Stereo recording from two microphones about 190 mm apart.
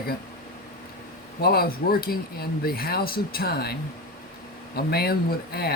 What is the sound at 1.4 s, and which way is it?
Speech, 55° left (ahead or behind).